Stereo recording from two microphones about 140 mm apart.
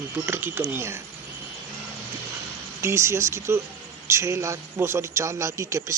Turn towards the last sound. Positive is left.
turn(degrees=-20)  # may be behind; listen again after turning